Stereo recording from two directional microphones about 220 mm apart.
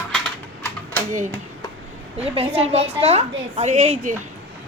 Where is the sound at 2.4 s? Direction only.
25° right (ahead or behind).